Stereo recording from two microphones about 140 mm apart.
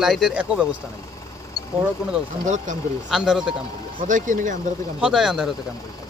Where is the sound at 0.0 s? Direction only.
Centre (ahead or behind).